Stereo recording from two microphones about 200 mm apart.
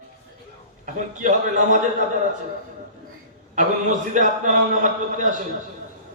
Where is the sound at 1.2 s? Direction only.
40° right (ahead or behind).